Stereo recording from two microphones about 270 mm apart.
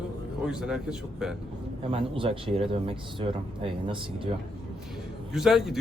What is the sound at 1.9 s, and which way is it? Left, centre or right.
Speech, centre.